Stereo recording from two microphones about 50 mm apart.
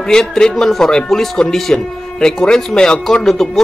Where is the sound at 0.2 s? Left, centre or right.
Centre.